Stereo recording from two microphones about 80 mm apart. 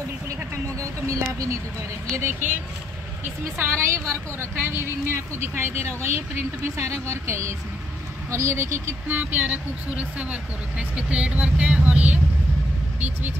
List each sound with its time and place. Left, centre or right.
0.7 s speech: right
2.1 s a woman's voice: right